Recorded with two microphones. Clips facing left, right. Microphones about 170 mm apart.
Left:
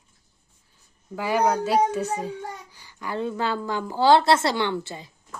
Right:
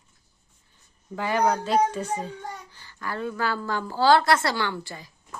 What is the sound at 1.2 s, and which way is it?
A child's voice, 10° left (ahead or behind).